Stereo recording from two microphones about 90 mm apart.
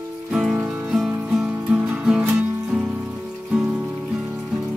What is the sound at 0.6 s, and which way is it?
Music, 15° right (ahead or behind).